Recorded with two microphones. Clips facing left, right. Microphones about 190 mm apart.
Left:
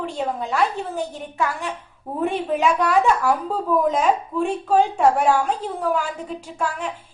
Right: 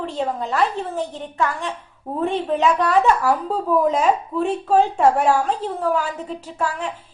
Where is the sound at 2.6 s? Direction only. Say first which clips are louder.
Right 1 dB; centre (ahead or behind).